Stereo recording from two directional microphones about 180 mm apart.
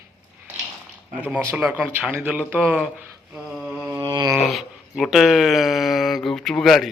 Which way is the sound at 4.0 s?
25° right (ahead or behind).